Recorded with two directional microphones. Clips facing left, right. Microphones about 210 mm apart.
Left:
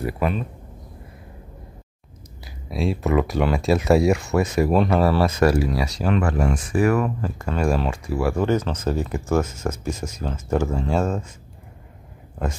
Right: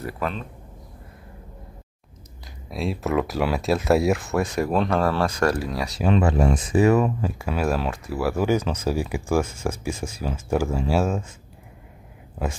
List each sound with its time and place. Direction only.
0.0 s speech: 10° left (ahead or behind)
2.4 s speech: centre (ahead or behind)
6.0 s speech: 20° right (ahead or behind)
7.2 s speech: 10° right (ahead or behind)